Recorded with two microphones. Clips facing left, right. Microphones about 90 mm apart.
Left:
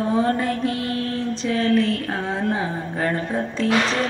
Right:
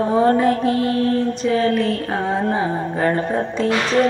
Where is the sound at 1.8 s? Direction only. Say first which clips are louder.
Right 3 dB; 45° right (ahead or behind).